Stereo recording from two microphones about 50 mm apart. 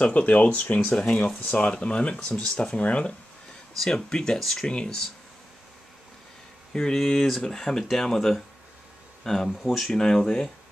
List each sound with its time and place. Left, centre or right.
0.0 s speech: left
3.7 s speech: centre
6.7 s speech: centre
9.9 s speech: centre